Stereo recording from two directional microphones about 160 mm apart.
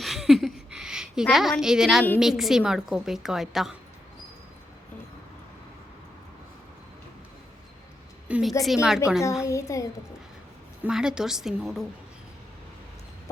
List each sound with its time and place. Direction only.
0.0 s a sound: centre (ahead or behind)
0.8 s a woman's voice: 5° right (ahead or behind)
8.3 s a woman's voice: centre (ahead or behind)
9.5 s a child's voice: 20° left (ahead or behind)
10.8 s a woman's voice: 5° right (ahead or behind)